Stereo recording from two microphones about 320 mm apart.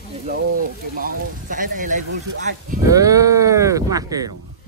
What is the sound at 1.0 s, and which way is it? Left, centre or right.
Speech, right.